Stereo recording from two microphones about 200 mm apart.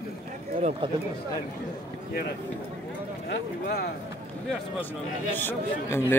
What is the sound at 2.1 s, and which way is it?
Speech, 50° left (ahead or behind).